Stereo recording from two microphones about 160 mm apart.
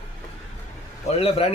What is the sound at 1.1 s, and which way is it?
Speech, 35° left (ahead or behind).